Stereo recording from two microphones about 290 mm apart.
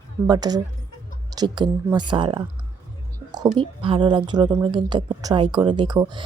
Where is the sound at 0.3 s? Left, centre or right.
Centre.